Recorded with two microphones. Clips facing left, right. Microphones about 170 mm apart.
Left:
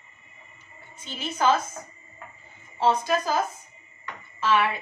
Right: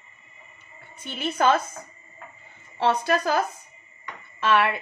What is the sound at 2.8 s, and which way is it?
Speech, 65° right (ahead or behind).